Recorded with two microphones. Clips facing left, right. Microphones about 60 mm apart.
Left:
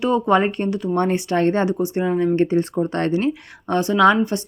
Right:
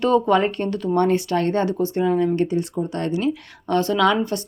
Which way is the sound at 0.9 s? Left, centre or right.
Left.